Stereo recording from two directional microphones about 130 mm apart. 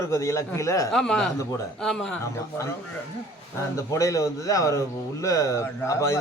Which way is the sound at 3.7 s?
25° left (ahead or behind).